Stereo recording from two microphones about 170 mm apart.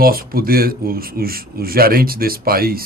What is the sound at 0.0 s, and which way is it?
A man's voice, 60° right (ahead or behind).